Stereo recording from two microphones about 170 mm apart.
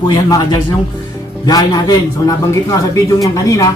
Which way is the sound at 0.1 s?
25° left (ahead or behind).